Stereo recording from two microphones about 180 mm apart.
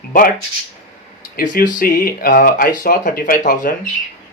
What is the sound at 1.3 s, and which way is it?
Speech, 50° left (ahead or behind).